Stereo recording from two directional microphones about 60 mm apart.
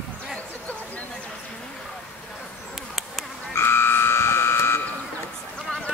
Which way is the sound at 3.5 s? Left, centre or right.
Left.